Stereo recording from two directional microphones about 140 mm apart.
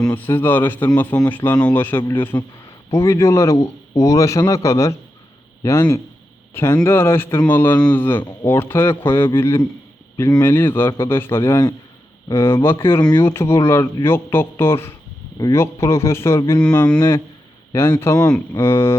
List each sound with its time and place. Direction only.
0.0 s a man's voice: 15° left (ahead or behind)
16.6 s a man's voice: 5° left (ahead or behind)
17.7 s a man's voice: 20° left (ahead or behind)